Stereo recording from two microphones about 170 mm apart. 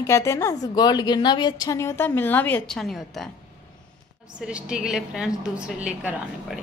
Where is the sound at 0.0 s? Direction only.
15° left (ahead or behind); by 3.3 s centre (ahead or behind).